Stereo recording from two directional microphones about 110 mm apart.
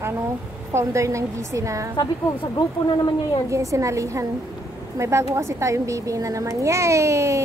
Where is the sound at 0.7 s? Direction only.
25° right (ahead or behind).